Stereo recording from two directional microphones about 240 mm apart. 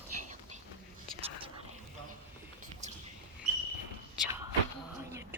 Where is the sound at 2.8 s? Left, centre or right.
Right.